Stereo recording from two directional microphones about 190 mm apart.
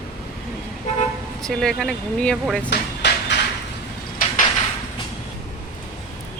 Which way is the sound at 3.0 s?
65° left (ahead or behind).